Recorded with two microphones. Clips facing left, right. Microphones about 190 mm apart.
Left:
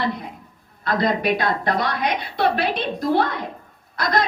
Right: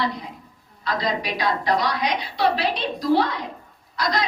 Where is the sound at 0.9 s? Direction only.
55° left (ahead or behind).